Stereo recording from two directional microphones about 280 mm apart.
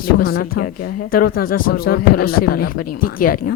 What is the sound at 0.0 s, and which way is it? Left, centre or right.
Speech, left.